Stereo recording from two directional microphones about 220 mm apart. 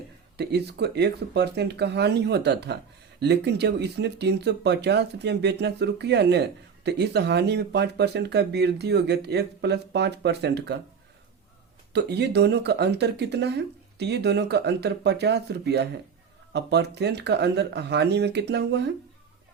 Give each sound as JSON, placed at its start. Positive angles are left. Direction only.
{"t": 0.3, "sound": "speech", "side_deg": -50}
{"t": 11.9, "sound": "speech", "side_deg": -50}